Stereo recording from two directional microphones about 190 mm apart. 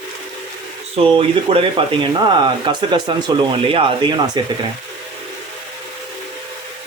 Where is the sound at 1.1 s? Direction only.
30° right (ahead or behind).